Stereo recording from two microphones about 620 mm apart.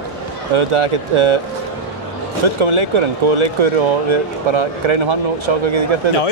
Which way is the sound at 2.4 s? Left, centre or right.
Right.